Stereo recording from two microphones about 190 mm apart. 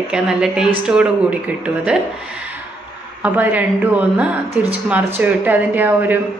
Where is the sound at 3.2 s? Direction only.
10° right (ahead or behind).